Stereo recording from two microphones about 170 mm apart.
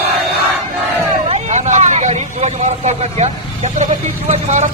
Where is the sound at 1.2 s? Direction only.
40° right (ahead or behind).